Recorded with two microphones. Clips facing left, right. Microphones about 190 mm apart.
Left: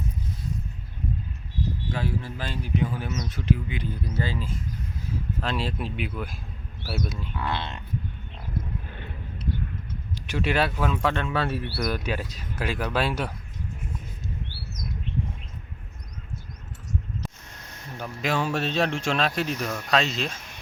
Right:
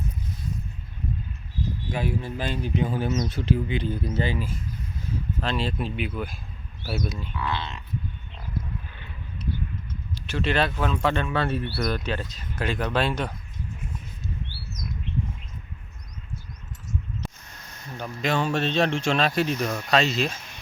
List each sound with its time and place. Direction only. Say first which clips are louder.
1.9 s speech: right 5 dB; 15° right (ahead or behind)
5.4 s speech: right 2 dB; centre (ahead or behind)
7.3 s speech: even; 50° left (ahead or behind)
8.9 s a sound: left 5 dB; 50° left (ahead or behind)
10.2 s speech: even; 15° left (ahead or behind)
17.9 s speech: right 1 dB; 5° left (ahead or behind)